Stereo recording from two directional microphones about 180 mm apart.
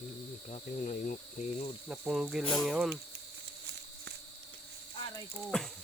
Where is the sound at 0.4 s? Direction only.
45° left (ahead or behind).